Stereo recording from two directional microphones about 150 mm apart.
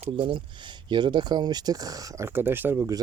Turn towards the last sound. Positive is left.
turn(degrees=-20)  # may be behind; listen again after turning